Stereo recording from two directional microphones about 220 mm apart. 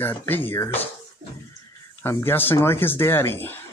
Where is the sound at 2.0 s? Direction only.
10° left (ahead or behind).